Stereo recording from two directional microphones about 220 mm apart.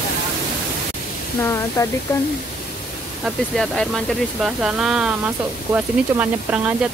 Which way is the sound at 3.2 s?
Centre (ahead or behind).